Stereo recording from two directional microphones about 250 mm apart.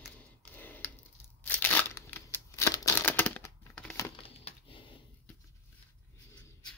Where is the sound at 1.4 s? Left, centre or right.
Centre.